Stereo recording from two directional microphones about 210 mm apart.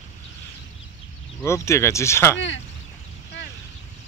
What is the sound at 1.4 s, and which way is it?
Speech, 15° left (ahead or behind).